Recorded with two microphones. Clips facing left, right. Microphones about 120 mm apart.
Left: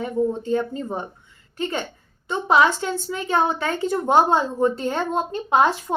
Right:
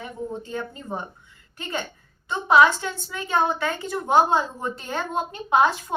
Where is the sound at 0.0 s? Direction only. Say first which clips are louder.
Left 9 dB; 30° left (ahead or behind).